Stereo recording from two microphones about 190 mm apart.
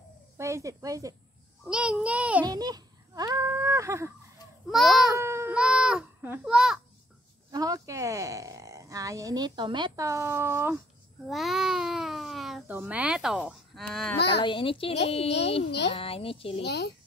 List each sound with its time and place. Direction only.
0.4 s speech: 15° right (ahead or behind)
1.7 s speech: 5° right (ahead or behind)
2.4 s speech: 20° right (ahead or behind)
4.6 s speech: centre (ahead or behind)
5.2 s a child's voice: 15° right (ahead or behind)
7.5 s speech: 20° right (ahead or behind)
11.2 s speech: centre (ahead or behind)
14.1 s a child's voice: 60° left (ahead or behind)
14.4 s a child's voice: 25° left (ahead or behind)
16.6 s a child's voice: 60° left (ahead or behind)